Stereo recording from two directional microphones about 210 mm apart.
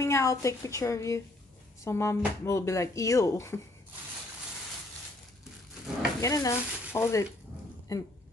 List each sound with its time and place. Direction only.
0.0 s speech: 15° left (ahead or behind)
6.2 s speech: 15° left (ahead or behind)